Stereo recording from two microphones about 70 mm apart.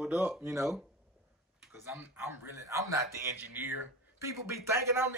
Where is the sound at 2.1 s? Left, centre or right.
Right.